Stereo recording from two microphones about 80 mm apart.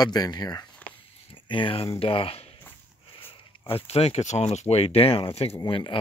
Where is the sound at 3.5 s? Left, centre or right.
Left.